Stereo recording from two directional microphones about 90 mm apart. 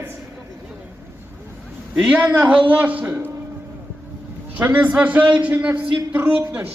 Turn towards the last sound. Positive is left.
turn(degrees=-20)  # may be behind; listen again after turning